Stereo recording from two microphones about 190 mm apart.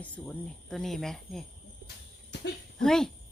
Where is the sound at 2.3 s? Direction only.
65° left (ahead or behind).